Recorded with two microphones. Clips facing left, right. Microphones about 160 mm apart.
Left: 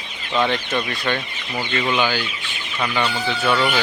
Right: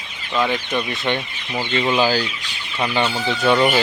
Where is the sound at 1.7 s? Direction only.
25° right (ahead or behind).